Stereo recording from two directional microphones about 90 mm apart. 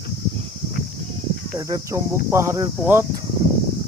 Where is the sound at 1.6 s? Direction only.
40° right (ahead or behind).